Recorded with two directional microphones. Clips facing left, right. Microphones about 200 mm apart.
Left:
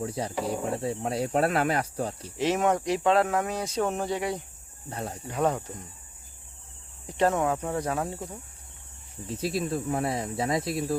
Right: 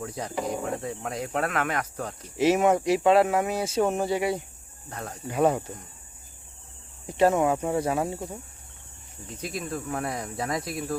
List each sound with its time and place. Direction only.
0.0 s speech: 30° left (ahead or behind)
0.3 s speech: 5° left (ahead or behind)
0.6 s speech: 30° left (ahead or behind)
2.4 s speech: 10° right (ahead or behind)
4.9 s speech: 25° left (ahead or behind)
5.3 s speech: 10° right (ahead or behind)
7.1 s speech: 10° right (ahead or behind)
9.4 s speech: 30° left (ahead or behind)